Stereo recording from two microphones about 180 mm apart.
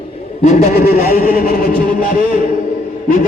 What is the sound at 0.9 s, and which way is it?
Music, 55° left (ahead or behind).